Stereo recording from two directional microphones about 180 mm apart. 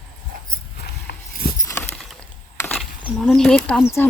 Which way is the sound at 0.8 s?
60° left (ahead or behind).